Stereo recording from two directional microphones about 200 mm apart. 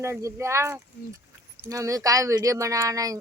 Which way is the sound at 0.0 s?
15° right (ahead or behind).